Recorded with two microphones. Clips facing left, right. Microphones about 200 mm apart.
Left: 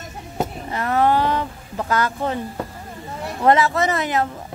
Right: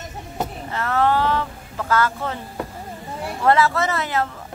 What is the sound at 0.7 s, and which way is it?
Speech, 15° left (ahead or behind).